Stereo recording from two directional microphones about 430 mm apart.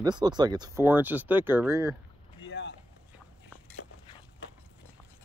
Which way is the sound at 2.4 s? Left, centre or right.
Left.